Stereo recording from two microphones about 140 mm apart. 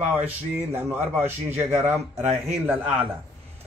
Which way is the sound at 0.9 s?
50° right (ahead or behind).